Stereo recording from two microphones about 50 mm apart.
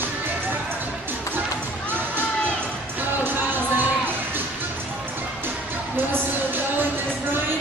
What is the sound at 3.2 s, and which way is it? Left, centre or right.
Music, right.